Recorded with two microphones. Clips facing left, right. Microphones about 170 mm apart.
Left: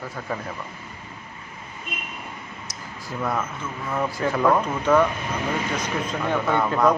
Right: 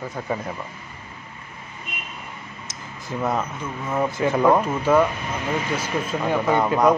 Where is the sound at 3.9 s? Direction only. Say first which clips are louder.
Right 3 dB; 20° right (ahead or behind).